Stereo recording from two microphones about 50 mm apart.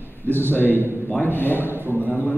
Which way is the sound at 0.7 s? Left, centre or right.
Right.